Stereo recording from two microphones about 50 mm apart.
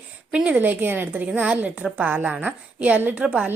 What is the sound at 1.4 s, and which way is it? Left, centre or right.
A woman's voice, right.